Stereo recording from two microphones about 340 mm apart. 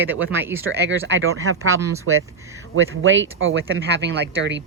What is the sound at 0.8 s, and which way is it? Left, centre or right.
Speech, right.